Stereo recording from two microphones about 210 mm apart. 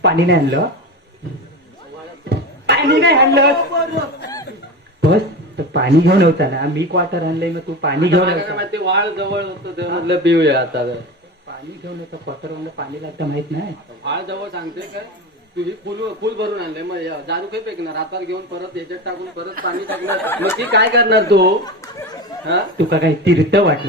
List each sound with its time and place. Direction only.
0.0 s speech: 55° right (ahead or behind)
2.3 s speech: 50° right (ahead or behind)
5.0 s speech: 50° right (ahead or behind)
12.7 s speech: 55° right (ahead or behind)
19.9 s speech: 10° left (ahead or behind)
20.7 s speech: 55° right (ahead or behind)